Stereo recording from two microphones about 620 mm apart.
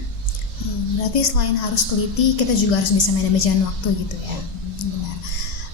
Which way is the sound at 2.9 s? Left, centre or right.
Left.